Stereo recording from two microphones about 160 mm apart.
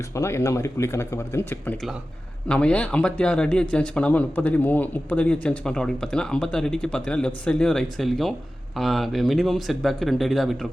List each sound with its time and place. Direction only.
0.1 s speech: 20° left (ahead or behind); by 10.7 s centre (ahead or behind)